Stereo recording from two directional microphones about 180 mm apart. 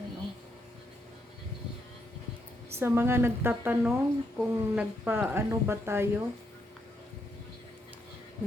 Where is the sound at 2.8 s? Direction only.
15° right (ahead or behind).